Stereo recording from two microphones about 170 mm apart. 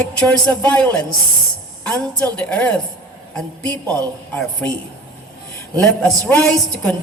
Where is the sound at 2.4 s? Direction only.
10° left (ahead or behind).